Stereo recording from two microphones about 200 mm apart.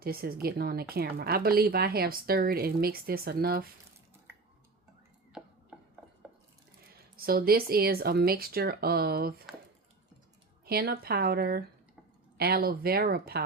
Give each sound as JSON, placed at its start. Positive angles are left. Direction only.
{"t": 0.0, "sound": "a woman's voice", "side_deg": -50}
{"t": 5.3, "sound": "a sound", "side_deg": -5}
{"t": 7.2, "sound": "a woman's voice", "side_deg": -50}
{"t": 10.7, "sound": "a woman's voice", "side_deg": -50}